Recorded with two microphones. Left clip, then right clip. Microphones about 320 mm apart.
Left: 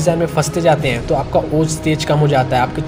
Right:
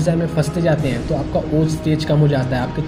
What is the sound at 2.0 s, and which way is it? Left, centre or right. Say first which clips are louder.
Speech: left 6 dB; left.